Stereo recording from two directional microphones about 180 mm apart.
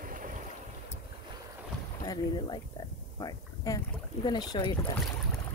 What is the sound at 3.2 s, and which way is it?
Speech, 20° left (ahead or behind).